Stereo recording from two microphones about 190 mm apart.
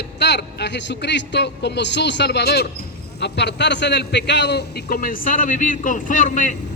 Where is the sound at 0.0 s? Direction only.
65° left (ahead or behind); by 6.6 s 45° left (ahead or behind).